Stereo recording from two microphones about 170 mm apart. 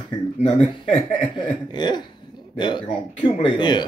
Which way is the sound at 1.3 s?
25° left (ahead or behind).